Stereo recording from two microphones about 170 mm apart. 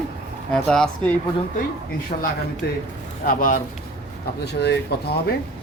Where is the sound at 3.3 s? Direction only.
55° left (ahead or behind).